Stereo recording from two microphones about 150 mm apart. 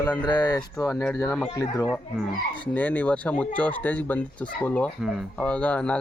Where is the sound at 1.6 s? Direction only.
25° left (ahead or behind).